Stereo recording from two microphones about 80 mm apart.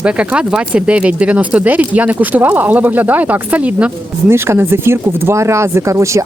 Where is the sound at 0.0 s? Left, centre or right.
Centre.